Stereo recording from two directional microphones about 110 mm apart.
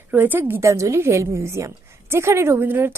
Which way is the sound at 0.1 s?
15° right (ahead or behind).